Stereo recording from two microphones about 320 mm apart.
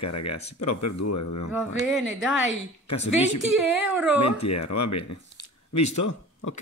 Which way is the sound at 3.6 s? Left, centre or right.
Centre.